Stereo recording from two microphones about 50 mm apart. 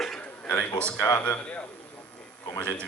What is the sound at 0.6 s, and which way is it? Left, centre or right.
Speech, left.